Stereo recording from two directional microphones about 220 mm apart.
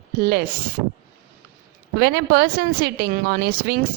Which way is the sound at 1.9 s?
45° right (ahead or behind).